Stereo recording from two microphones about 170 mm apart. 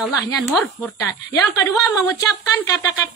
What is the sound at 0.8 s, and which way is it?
A woman's voice, 20° left (ahead or behind).